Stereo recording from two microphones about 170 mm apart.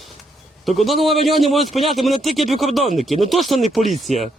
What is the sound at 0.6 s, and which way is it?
A man's voice, centre (ahead or behind).